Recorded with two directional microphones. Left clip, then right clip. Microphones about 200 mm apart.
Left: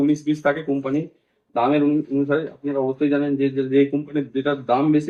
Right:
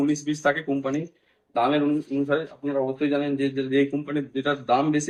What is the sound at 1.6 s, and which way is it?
Speech, 10° right (ahead or behind).